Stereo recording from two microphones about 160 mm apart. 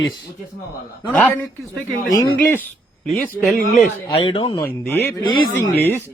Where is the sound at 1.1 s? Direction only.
10° left (ahead or behind).